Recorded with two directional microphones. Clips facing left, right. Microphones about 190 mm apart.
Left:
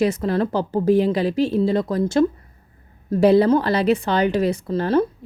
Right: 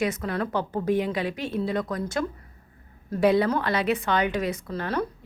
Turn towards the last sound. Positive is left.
turn(degrees=30)  # may be behind; listen again after turning